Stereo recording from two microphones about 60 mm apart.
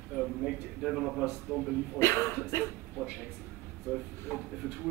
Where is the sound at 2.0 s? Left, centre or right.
Left.